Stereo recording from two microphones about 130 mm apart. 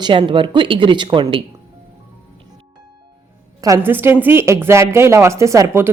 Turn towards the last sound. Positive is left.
turn(degrees=-20)  # may be behind; listen again after turning